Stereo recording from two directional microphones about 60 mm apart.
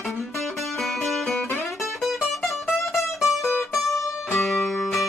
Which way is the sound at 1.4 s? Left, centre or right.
Left.